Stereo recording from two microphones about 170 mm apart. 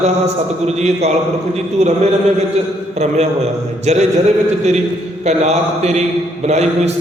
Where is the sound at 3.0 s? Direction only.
40° right (ahead or behind).